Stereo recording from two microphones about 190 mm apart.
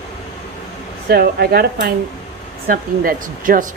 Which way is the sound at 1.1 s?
55° right (ahead or behind).